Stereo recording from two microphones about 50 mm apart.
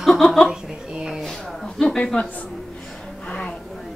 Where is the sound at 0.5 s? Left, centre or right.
Centre.